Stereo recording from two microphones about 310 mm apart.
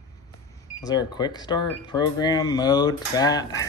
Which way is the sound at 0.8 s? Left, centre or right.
Centre.